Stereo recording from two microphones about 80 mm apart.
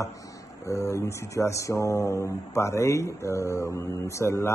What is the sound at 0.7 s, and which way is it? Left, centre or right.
Speech, left.